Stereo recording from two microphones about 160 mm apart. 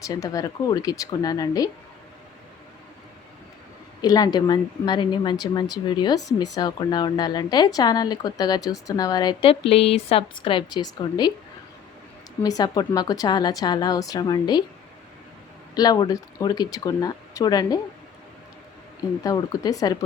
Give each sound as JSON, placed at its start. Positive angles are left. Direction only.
{"t": 0.1, "sound": "a woman's voice", "side_deg": 20}
{"t": 4.0, "sound": "a woman's voice", "side_deg": 25}
{"t": 12.4, "sound": "a woman's voice", "side_deg": 25}
{"t": 15.7, "sound": "a woman's voice", "side_deg": 25}
{"t": 19.2, "sound": "a woman's voice", "side_deg": 20}